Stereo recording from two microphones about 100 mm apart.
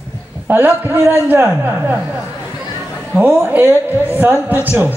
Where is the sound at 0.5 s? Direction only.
20° right (ahead or behind).